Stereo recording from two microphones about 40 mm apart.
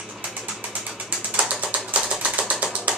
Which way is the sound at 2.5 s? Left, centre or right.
Right.